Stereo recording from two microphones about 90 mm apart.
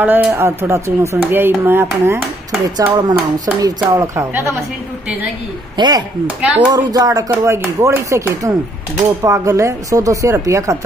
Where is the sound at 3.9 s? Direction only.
35° right (ahead or behind).